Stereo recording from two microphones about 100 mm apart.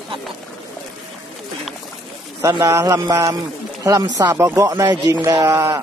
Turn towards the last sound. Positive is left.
turn(degrees=-35)  # may be behind; listen again after turning